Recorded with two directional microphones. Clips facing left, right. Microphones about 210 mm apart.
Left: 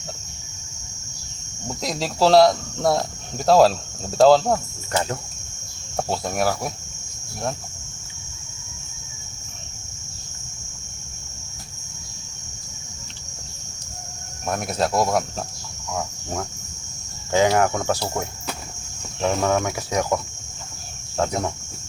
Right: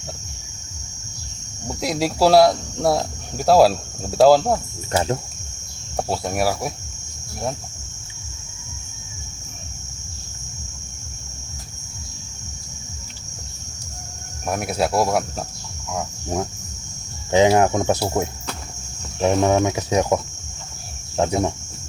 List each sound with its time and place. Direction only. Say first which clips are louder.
1.6 s speech: right 4 dB; 10° right (ahead or behind)
4.9 s speech: right 3 dB; 25° right (ahead or behind)
6.0 s speech: right 1 dB; 10° right (ahead or behind)
14.4 s speech: right 2 dB; 10° right (ahead or behind)
17.3 s speech: right 3 dB; 20° right (ahead or behind)
19.2 s speech: right 4 dB; 20° right (ahead or behind)